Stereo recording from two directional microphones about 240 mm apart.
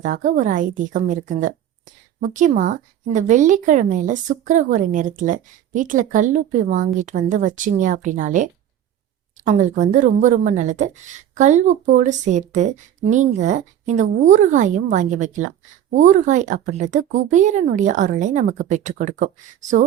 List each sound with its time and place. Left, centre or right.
0.0 s speech: right